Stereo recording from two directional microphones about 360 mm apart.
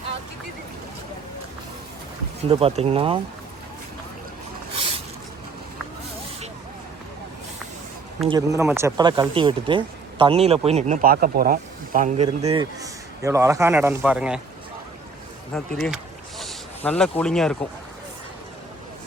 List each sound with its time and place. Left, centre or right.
2.5 s speech: centre
4.7 s a sound: centre
8.3 s speech: centre
15.5 s speech: centre